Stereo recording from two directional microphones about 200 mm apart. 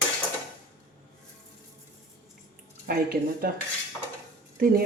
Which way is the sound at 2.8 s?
45° right (ahead or behind).